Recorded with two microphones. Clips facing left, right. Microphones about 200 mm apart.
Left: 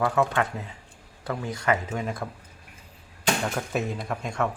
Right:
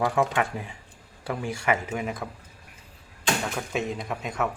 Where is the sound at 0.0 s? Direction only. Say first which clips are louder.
Even; 15° right (ahead or behind).